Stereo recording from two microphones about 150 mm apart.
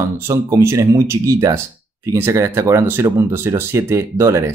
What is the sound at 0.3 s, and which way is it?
Speech, 20° right (ahead or behind).